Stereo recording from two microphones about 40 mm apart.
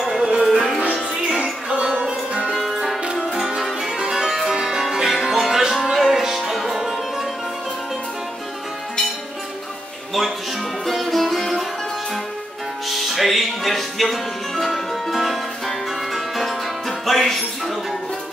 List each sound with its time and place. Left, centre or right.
0.2 s music: right
0.5 s music: centre
1.3 s music: right
2.5 s music: centre
3.0 s music: right
3.3 s music: centre
4.3 s music: centre
10.9 s music: centre
12.8 s music: centre